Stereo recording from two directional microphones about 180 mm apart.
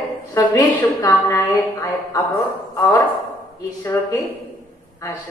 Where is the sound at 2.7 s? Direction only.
20° left (ahead or behind).